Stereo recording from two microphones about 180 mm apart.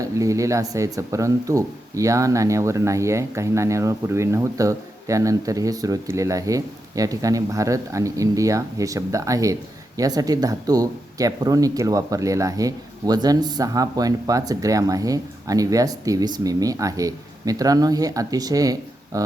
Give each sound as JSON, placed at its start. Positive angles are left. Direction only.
{"t": 0.0, "sound": "speech", "side_deg": -20}